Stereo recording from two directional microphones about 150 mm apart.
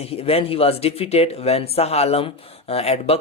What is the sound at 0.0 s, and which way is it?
Speech, 40° left (ahead or behind).